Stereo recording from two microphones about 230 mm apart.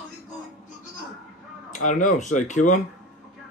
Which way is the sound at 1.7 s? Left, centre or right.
Left.